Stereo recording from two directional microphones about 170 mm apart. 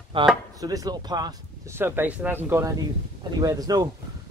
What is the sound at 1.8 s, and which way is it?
Speech, 10° right (ahead or behind).